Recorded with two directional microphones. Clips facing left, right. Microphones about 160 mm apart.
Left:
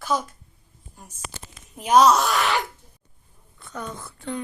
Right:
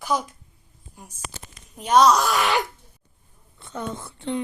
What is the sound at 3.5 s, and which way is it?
Speech, 25° right (ahead or behind).